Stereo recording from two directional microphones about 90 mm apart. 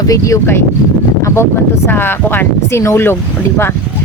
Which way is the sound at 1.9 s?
25° left (ahead or behind).